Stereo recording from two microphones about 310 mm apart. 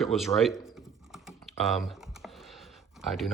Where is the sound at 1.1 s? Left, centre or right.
Centre.